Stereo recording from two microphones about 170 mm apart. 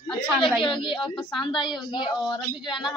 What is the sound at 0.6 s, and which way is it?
A woman's voice, 30° left (ahead or behind).